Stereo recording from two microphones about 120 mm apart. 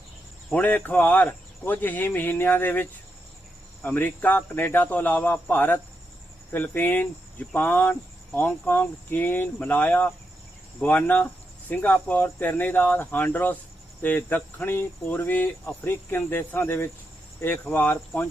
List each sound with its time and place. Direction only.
0.5 s speech: 15° left (ahead or behind)
3.8 s speech: 15° left (ahead or behind)